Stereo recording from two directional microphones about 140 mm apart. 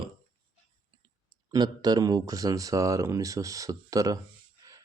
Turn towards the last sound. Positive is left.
turn(degrees=-25)  # may be behind; listen again after turning